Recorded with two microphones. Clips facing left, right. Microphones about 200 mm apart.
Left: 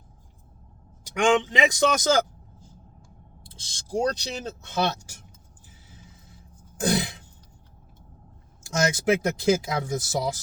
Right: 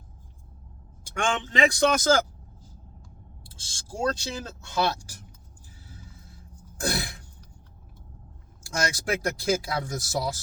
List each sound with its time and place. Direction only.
1.1 s speech: 15° left (ahead or behind)
3.4 s speech: 20° left (ahead or behind)
6.7 s throat clearing: 20° left (ahead or behind)
8.6 s speech: 20° left (ahead or behind)